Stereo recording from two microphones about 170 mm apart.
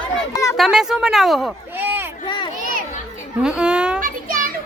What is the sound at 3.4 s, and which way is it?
Speech, 5° right (ahead or behind).